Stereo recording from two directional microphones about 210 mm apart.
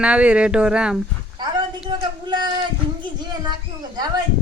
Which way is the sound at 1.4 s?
20° right (ahead or behind).